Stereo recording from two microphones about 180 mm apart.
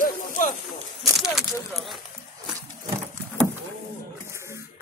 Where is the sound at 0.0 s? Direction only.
45° left (ahead or behind).